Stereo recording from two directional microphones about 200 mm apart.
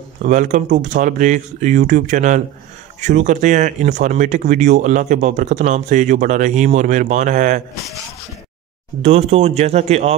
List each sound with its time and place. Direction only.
0.2 s speech: 40° right (ahead or behind)
9.0 s speech: 35° right (ahead or behind)